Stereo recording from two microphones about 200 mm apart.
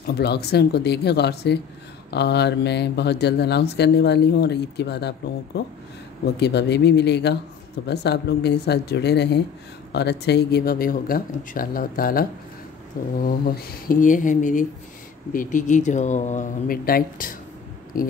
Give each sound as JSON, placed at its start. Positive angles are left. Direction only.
{"t": 0.0, "sound": "speech", "side_deg": 55}